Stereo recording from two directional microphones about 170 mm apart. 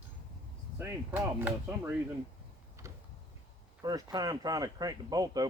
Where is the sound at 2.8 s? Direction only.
15° right (ahead or behind).